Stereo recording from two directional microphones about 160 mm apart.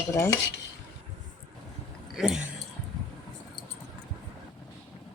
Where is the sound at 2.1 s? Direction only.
Centre (ahead or behind).